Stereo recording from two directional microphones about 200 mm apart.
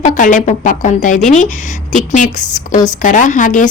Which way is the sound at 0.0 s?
40° left (ahead or behind).